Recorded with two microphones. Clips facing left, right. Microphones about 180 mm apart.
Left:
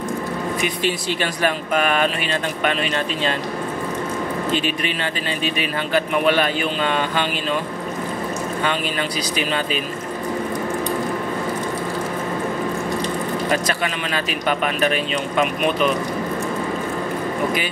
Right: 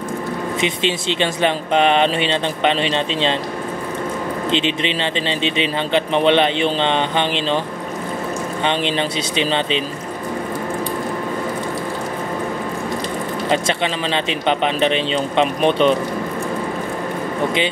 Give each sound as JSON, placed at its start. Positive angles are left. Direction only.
{"t": 0.6, "sound": "speech", "side_deg": -25}
{"t": 4.5, "sound": "speech", "side_deg": -25}
{"t": 8.6, "sound": "speech", "side_deg": -25}
{"t": 13.5, "sound": "speech", "side_deg": -25}